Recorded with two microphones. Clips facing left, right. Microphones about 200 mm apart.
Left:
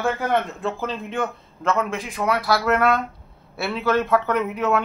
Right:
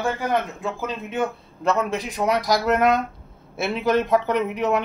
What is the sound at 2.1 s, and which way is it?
Speech, 20° right (ahead or behind).